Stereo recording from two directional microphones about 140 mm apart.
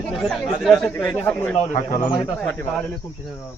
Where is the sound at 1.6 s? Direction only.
60° left (ahead or behind).